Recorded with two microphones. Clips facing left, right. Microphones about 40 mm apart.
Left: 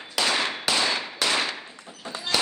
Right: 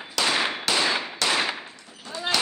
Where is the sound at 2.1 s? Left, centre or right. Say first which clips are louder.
Right 4 dB; left.